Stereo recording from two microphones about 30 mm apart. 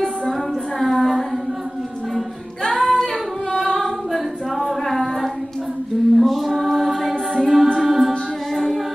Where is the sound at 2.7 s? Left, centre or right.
Centre.